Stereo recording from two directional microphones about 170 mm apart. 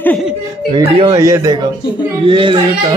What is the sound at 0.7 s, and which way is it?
Speech, 30° right (ahead or behind).